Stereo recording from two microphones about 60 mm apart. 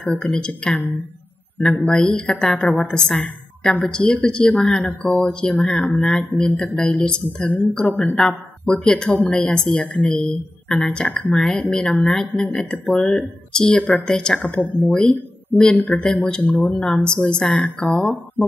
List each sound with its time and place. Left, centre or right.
0.0 s speech: centre